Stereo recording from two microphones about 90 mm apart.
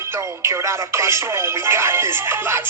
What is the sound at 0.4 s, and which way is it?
Speech, 35° right (ahead or behind).